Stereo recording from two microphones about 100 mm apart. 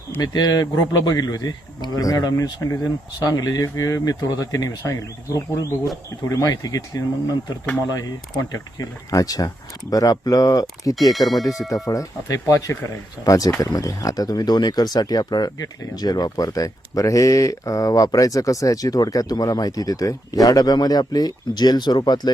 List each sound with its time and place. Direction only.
0.2 s speech: 45° left (ahead or behind)
8.4 s speech: 35° left (ahead or behind)
10.9 s speech: centre (ahead or behind)
11.7 s speech: 35° left (ahead or behind)